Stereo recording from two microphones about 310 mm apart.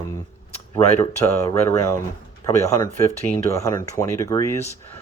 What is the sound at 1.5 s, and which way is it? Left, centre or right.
Speech, centre.